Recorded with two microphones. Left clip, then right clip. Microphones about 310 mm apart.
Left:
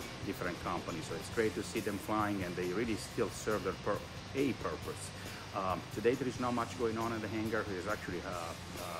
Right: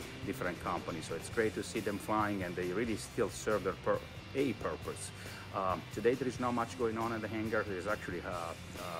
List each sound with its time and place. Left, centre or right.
0.4 s speech: centre
1.9 s speech: centre